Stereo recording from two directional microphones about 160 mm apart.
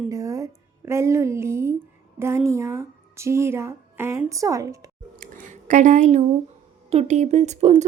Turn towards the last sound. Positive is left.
turn(degrees=-45)  # may be behind; listen again after turning